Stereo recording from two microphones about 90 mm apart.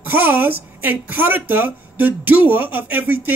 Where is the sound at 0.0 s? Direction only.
20° right (ahead or behind).